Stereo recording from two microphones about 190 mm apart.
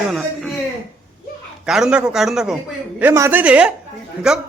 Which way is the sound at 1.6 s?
5° right (ahead or behind).